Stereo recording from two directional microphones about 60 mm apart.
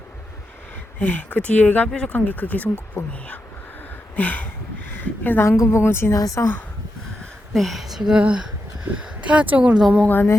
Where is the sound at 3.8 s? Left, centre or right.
Left.